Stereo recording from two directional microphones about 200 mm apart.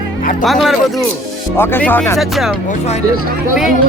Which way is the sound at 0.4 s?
Centre (ahead or behind).